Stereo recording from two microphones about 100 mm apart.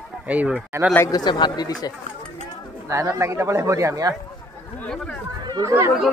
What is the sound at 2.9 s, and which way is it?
Speech, 30° right (ahead or behind).